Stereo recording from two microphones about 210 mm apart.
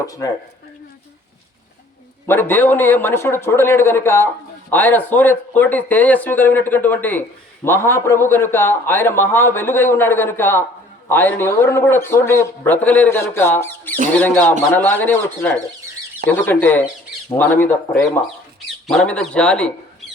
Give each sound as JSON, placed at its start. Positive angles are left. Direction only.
{"t": 0.0, "sound": "speech", "side_deg": 15}
{"t": 2.2, "sound": "speech", "side_deg": 10}